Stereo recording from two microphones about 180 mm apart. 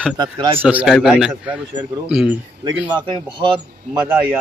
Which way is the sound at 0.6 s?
10° right (ahead or behind).